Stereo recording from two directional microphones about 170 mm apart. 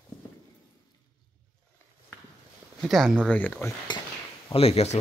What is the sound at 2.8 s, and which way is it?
Speech, centre (ahead or behind).